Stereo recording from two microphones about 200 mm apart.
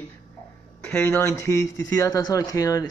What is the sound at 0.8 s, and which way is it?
Speech, 10° left (ahead or behind).